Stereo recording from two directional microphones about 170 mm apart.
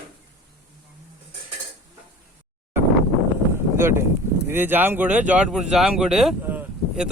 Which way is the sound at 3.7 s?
15° right (ahead or behind).